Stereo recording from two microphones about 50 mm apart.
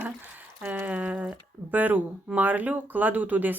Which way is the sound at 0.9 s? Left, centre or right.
Right.